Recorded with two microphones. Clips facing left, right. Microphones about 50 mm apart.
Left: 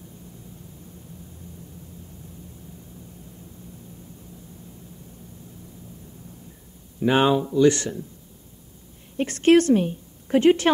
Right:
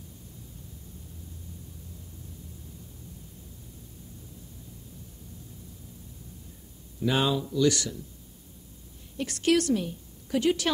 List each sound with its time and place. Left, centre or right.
7.0 s speech: left
9.1 s a woman's voice: left